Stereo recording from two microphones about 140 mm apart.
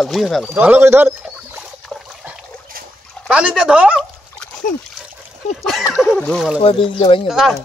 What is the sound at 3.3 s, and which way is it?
Speech, 5° right (ahead or behind).